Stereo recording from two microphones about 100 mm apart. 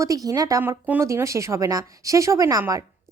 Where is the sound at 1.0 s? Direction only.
30° right (ahead or behind).